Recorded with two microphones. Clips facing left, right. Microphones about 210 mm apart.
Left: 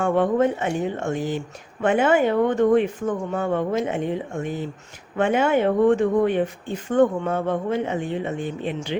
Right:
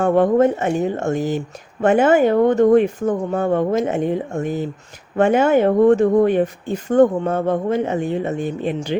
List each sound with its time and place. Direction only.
0.0 s speech: 40° right (ahead or behind)